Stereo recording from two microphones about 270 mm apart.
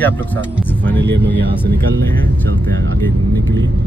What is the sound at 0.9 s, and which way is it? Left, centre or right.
Speech, right.